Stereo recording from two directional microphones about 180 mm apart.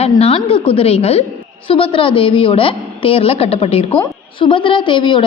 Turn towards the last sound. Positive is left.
turn(degrees=25)  # may be behind; listen again after turning